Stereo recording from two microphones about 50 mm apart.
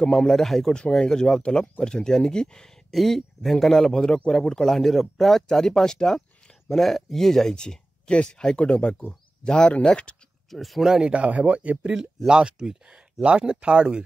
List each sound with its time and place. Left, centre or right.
0.0 s speech: centre
0.3 s speech: centre
2.9 s speech: centre
7.5 s speech: centre
10.5 s speech: centre
10.9 s speech: centre